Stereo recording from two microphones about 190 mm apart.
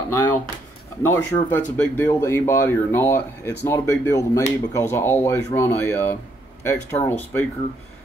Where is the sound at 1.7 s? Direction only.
10° left (ahead or behind).